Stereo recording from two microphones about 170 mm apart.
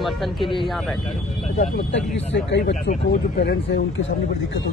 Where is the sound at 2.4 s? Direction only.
90° left.